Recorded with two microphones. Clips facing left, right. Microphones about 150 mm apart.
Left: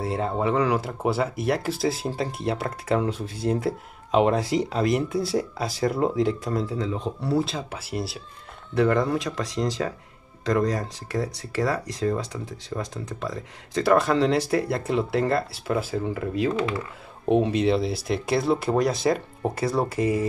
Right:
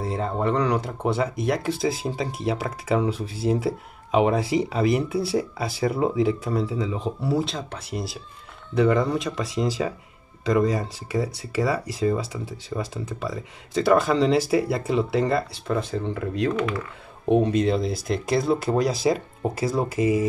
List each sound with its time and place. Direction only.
0.0 s speech: 5° left (ahead or behind)
16.5 s speech: 25° left (ahead or behind)
17.3 s speech: centre (ahead or behind)